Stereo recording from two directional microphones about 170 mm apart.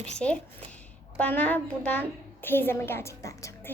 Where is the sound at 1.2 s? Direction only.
10° left (ahead or behind).